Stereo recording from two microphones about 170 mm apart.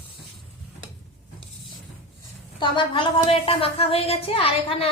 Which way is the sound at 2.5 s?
30° left (ahead or behind).